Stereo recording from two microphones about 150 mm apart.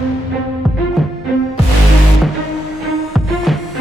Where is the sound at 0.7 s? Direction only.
Centre (ahead or behind).